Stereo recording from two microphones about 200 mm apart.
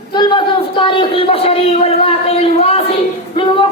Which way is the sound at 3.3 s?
25° left (ahead or behind).